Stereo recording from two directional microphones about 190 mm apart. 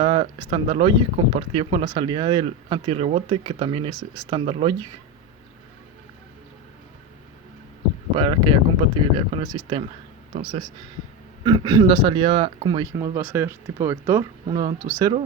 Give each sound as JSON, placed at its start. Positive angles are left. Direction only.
{"t": 0.0, "sound": "speech", "side_deg": -25}
{"t": 8.1, "sound": "speech", "side_deg": -25}
{"t": 11.4, "sound": "speech", "side_deg": -25}